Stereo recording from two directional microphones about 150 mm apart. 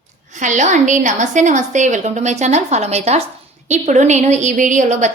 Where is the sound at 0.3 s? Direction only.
55° right (ahead or behind).